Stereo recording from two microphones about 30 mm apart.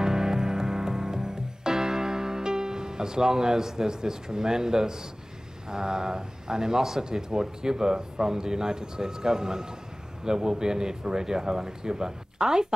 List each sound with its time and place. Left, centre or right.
0.0 s music: centre
3.3 s speech: centre